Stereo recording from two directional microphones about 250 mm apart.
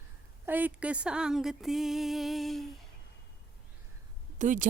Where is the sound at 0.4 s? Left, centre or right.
Centre.